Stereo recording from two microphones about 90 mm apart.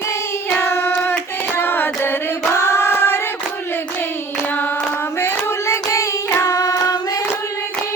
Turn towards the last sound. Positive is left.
turn(degrees=40)  # may be behind; listen again after turning